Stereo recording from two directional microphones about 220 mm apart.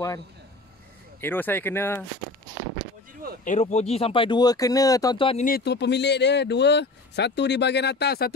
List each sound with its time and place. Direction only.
1.2 s speech: 10° left (ahead or behind)
3.4 s speech: 30° left (ahead or behind)
5.4 s speech: 45° left (ahead or behind)